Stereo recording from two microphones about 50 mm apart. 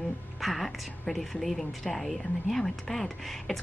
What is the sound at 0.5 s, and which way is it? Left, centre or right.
A woman's voice, centre.